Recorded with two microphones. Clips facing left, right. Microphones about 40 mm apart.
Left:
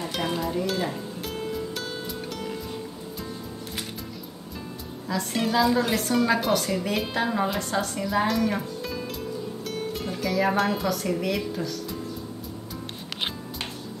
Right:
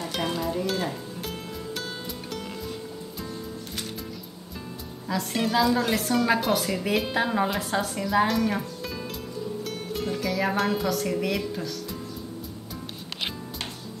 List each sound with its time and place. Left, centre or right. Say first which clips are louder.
0.4 s music: left 1 dB; centre
5.0 s a woman's voice: even; centre